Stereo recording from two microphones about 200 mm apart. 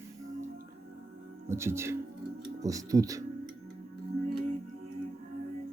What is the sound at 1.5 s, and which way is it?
Speech, 15° right (ahead or behind).